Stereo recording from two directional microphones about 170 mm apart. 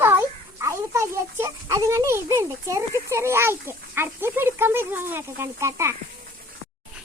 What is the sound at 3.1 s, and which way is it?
Speech, 15° right (ahead or behind).